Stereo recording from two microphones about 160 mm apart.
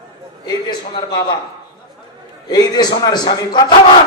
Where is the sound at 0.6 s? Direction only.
30° left (ahead or behind).